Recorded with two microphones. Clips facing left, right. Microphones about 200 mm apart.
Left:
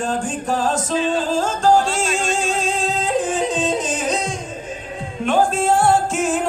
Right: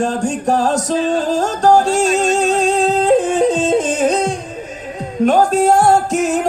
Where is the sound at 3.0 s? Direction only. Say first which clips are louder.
Right 7 dB; 60° right (ahead or behind).